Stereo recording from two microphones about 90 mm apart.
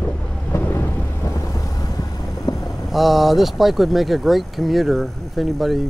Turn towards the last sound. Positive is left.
turn(degrees=0)  # may be behind; listen again after turning